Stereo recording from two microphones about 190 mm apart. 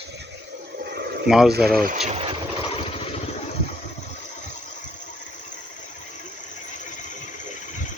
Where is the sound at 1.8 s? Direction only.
40° right (ahead or behind).